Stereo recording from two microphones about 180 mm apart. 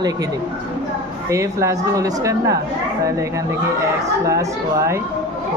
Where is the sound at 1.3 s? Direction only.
15° right (ahead or behind).